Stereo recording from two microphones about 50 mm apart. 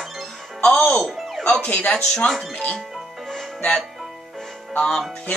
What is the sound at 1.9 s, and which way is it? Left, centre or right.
Speech, centre.